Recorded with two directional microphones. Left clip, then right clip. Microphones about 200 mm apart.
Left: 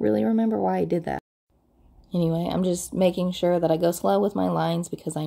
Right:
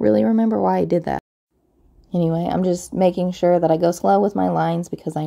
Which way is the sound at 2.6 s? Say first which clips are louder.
Right 5 dB; 45° right (ahead or behind).